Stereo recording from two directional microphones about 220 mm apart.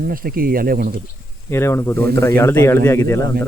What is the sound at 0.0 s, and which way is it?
Speech, 40° right (ahead or behind).